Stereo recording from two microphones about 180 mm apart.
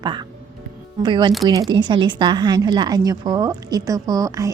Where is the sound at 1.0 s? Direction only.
25° right (ahead or behind).